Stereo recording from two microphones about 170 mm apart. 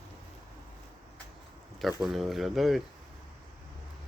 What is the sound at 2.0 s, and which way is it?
Speech, centre (ahead or behind).